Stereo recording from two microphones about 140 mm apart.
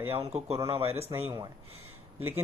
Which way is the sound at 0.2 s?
45° right (ahead or behind).